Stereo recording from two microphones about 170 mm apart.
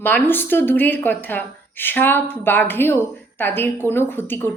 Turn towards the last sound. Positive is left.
turn(degrees=15)  # may be behind; listen again after turning